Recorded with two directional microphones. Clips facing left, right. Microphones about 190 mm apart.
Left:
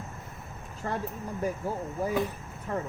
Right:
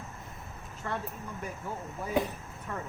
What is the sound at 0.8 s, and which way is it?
Speech, 35° left (ahead or behind).